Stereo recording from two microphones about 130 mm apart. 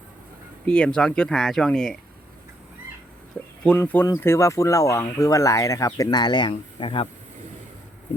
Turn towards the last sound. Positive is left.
turn(degrees=40)  # may be behind; listen again after turning